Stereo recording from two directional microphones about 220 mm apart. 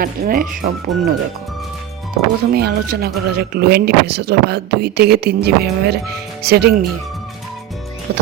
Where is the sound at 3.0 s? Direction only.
45° right (ahead or behind).